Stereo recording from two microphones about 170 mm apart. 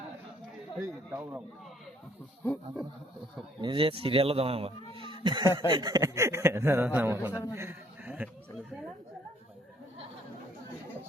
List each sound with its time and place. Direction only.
0.8 s speech: 10° right (ahead or behind)
3.6 s speech: 30° right (ahead or behind); by 7.3 s 15° right (ahead or behind)
7.5 s a sound: 15° right (ahead or behind)